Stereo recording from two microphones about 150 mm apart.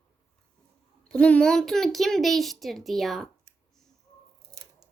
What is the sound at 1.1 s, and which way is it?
Speech, 5° left (ahead or behind).